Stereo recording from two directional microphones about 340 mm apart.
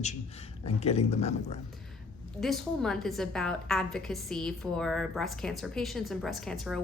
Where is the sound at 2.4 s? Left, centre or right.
Centre.